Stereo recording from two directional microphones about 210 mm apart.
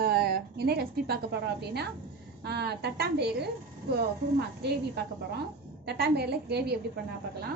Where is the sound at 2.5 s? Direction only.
50° right (ahead or behind).